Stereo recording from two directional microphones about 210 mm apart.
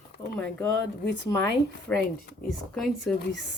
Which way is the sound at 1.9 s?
5° left (ahead or behind).